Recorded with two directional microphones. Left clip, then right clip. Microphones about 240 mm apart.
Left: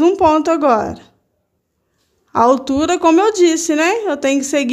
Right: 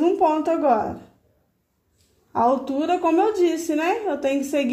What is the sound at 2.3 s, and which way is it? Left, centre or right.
A woman's voice, left.